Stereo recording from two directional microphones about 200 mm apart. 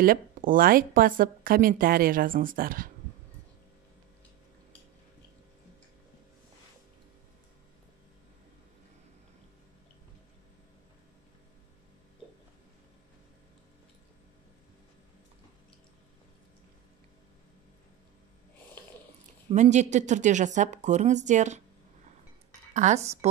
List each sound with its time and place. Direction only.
0.0 s speech: 45° right (ahead or behind)
19.5 s a woman's voice: 35° right (ahead or behind)
22.8 s a woman's voice: 35° right (ahead or behind)